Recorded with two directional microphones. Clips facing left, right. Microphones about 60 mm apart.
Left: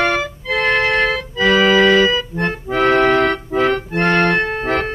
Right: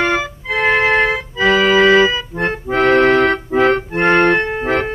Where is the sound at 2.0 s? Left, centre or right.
Centre.